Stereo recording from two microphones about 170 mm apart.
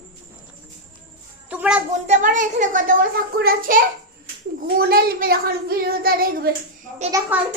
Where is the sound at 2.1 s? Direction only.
50° right (ahead or behind).